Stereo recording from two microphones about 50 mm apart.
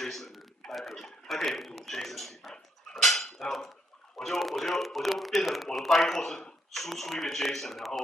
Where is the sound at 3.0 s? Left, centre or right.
Centre.